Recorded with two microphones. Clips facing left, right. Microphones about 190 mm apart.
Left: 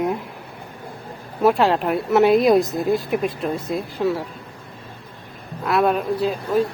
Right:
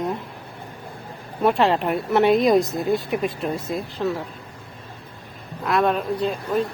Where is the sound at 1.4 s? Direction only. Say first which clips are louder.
Left 2 dB; centre (ahead or behind).